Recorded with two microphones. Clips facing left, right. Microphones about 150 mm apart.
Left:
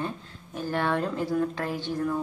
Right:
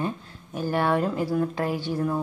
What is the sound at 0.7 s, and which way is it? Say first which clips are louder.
Speech: right 3 dB; 10° right (ahead or behind).